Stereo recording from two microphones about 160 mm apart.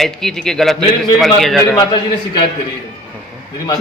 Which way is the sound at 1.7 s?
25° left (ahead or behind).